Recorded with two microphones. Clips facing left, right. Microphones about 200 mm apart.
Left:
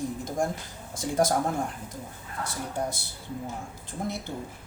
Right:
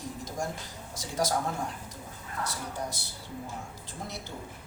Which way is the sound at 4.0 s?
55° left (ahead or behind).